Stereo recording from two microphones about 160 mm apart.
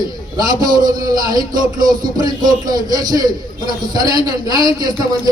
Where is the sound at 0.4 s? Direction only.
25° right (ahead or behind).